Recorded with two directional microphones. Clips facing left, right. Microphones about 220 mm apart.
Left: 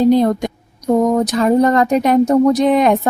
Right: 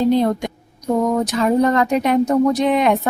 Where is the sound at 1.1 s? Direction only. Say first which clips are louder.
Left 3 dB; 35° left (ahead or behind).